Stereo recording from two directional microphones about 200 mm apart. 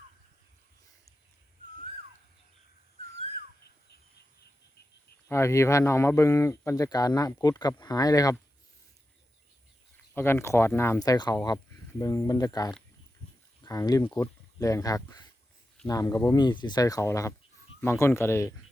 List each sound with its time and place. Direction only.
5.3 s speech: 15° left (ahead or behind)
10.2 s speech: 10° left (ahead or behind)